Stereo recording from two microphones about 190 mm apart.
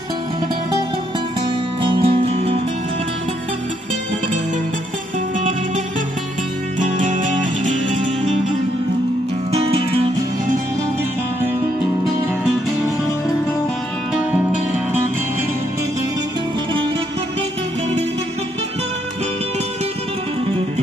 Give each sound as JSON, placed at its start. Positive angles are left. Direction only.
{"t": 1.8, "sound": "music", "side_deg": -25}
{"t": 6.8, "sound": "music", "side_deg": -40}
{"t": 9.5, "sound": "music", "side_deg": -30}